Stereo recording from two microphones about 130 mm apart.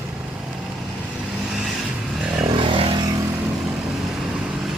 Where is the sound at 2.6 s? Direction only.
45° right (ahead or behind).